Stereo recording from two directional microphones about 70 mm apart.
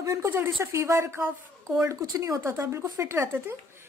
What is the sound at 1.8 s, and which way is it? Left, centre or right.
A woman's voice, right.